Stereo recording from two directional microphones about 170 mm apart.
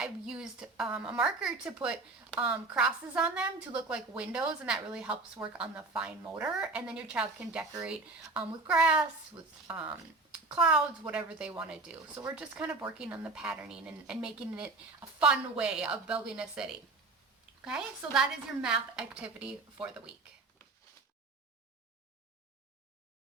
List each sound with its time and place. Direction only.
0.0 s a woman's voice: 5° right (ahead or behind)
7.6 s a woman's voice: 20° right (ahead or behind)
7.9 s a woman's voice: 5° right (ahead or behind)